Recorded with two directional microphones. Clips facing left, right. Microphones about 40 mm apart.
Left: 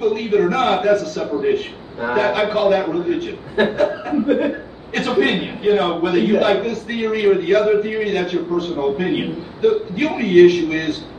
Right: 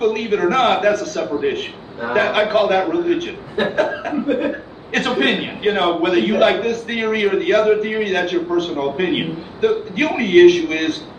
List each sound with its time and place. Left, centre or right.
0.0 s a man's voice: right